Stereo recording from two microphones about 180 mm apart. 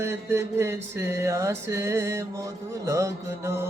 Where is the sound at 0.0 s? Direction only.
15° right (ahead or behind).